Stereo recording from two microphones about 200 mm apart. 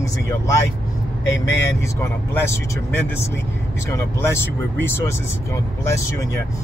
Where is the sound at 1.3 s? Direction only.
65° left (ahead or behind).